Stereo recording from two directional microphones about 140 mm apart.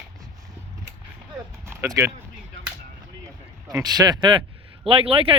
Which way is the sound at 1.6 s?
20° right (ahead or behind).